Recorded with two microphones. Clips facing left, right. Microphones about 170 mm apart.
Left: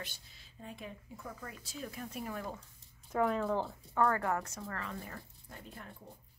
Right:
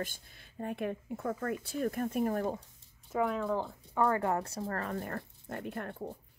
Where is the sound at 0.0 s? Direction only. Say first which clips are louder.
Right 9 dB; 50° right (ahead or behind).